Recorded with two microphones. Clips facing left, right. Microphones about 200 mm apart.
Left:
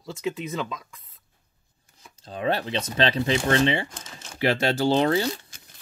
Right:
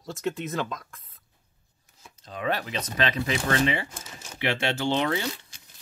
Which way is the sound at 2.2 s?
30° left (ahead or behind).